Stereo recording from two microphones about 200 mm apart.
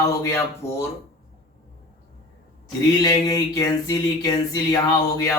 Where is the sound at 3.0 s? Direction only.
15° left (ahead or behind).